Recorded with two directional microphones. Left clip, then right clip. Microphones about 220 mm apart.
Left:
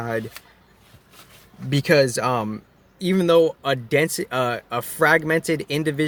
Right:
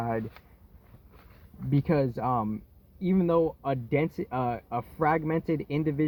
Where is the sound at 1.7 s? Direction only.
15° left (ahead or behind).